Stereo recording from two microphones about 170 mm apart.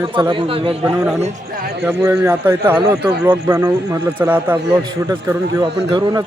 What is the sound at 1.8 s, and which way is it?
Speech, 10° right (ahead or behind).